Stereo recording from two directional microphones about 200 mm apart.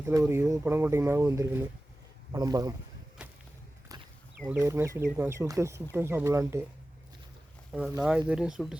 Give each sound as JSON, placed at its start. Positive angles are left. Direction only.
{"t": 0.0, "sound": "speech", "side_deg": -15}
{"t": 4.4, "sound": "speech", "side_deg": -15}
{"t": 7.7, "sound": "speech", "side_deg": -5}